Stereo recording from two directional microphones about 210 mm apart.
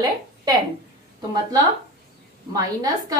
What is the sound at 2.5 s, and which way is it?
Speech, 15° right (ahead or behind).